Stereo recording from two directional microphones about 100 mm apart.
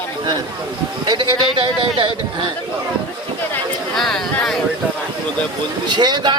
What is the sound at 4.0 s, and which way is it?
Speech, 5° left (ahead or behind).